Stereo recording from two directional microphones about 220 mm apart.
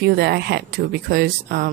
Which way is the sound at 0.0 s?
45° right (ahead or behind).